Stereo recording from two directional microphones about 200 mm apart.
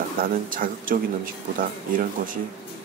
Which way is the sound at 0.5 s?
45° right (ahead or behind).